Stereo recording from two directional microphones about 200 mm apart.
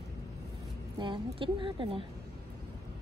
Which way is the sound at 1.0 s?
25° right (ahead or behind).